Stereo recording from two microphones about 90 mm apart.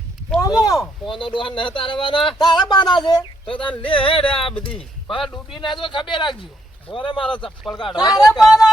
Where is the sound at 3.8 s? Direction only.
75° left (ahead or behind).